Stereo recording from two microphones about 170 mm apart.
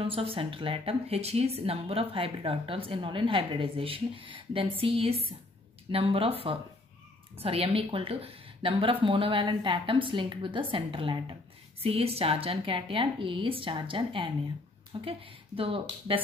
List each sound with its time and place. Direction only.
0.0 s speech: 30° right (ahead or behind)